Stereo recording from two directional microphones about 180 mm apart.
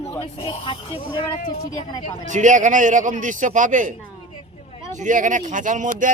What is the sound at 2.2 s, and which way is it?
Speech, 45° right (ahead or behind).